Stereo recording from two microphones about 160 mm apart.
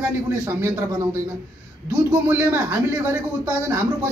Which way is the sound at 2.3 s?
15° right (ahead or behind).